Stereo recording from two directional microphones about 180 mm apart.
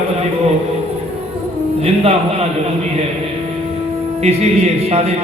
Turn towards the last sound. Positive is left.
turn(degrees=-35)  # may be behind; listen again after turning